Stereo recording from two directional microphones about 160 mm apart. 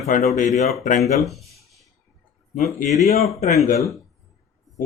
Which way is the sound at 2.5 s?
45° left (ahead or behind).